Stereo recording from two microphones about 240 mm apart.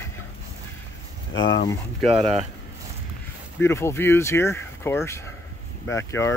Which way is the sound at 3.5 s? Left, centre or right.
Centre.